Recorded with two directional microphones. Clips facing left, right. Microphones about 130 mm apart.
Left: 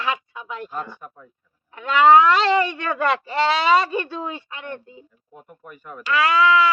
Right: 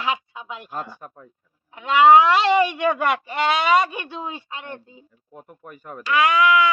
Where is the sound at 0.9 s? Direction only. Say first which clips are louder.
Even; 40° right (ahead or behind).